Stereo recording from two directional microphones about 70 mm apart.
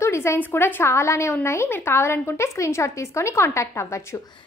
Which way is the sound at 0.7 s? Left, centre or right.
Left.